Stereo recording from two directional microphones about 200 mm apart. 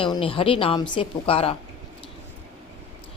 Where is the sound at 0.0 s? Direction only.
25° left (ahead or behind).